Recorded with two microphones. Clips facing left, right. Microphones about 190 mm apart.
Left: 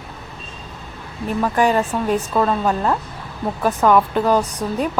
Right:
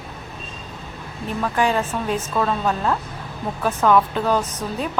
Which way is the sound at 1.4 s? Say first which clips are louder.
Left 3 dB; 10° left (ahead or behind).